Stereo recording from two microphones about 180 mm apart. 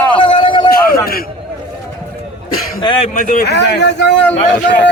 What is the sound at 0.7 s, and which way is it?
Speech, 55° left (ahead or behind).